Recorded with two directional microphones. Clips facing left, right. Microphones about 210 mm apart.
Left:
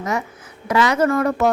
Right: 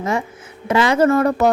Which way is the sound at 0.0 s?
30° right (ahead or behind).